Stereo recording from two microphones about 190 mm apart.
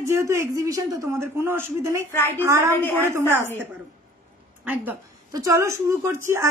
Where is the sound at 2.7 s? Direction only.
10° left (ahead or behind).